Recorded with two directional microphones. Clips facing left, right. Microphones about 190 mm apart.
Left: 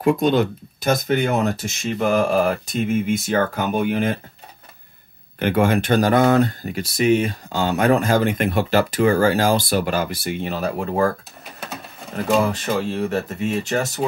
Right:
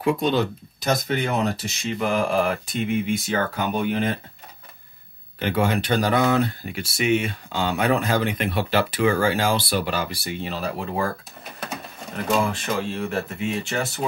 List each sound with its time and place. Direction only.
0.0 s speech: 50° left (ahead or behind)
5.4 s speech: 50° left (ahead or behind)
12.4 s speech: 40° left (ahead or behind)